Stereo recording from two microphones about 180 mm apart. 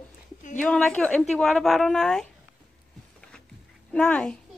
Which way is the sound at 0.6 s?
5° left (ahead or behind).